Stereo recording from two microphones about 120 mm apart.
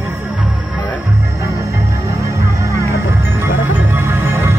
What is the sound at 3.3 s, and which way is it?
Music, 20° right (ahead or behind).